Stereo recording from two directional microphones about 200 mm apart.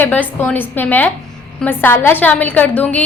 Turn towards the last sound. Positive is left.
turn(degrees=5)  # may be behind; listen again after turning